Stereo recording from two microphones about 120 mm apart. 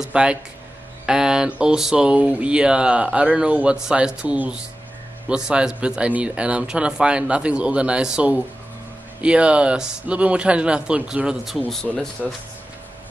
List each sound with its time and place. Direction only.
0.0 s speech: 10° right (ahead or behind)